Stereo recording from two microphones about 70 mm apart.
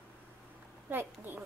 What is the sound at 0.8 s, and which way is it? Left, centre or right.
Speech, right.